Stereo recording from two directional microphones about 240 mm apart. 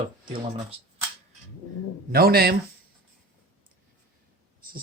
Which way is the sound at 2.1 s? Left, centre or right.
Right.